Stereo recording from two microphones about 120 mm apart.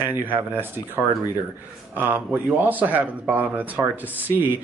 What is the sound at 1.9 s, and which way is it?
Speech, 15° right (ahead or behind).